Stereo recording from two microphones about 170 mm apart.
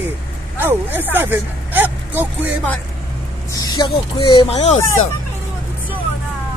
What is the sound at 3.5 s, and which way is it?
Speech, 20° left (ahead or behind).